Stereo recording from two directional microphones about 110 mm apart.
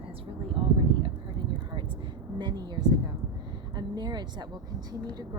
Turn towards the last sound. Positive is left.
turn(degrees=-40)  # may be behind; listen again after turning